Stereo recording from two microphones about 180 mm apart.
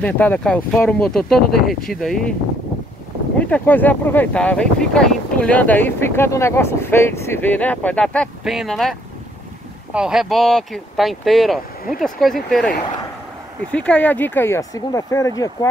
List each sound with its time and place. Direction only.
0.0 s speech: 10° left (ahead or behind)
3.3 s speech: 10° left (ahead or behind)
9.9 s speech: 5° right (ahead or behind); by 15.7 s 20° left (ahead or behind)